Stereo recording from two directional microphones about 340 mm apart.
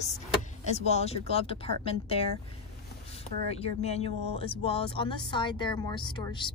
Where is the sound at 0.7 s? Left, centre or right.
Centre.